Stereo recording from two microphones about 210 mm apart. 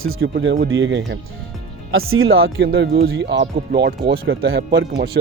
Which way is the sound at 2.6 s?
50° right (ahead or behind).